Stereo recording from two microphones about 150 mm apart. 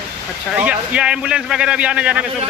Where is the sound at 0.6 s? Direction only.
10° right (ahead or behind).